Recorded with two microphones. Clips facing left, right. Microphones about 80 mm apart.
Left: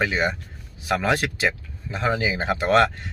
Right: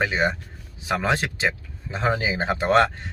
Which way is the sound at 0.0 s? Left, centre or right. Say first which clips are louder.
Even; right.